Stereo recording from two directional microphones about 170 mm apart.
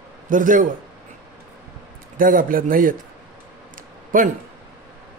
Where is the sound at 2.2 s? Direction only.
55° right (ahead or behind).